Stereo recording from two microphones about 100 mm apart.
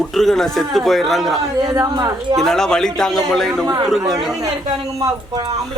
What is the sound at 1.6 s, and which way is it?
Speech, 40° right (ahead or behind).